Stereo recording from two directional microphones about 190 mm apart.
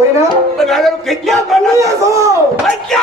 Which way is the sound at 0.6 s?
Centre (ahead or behind).